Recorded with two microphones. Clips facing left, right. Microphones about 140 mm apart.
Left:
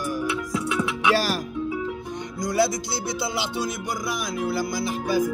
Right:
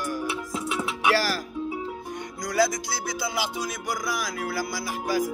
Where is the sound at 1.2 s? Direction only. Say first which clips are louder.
Left 2 dB; 20° left (ahead or behind).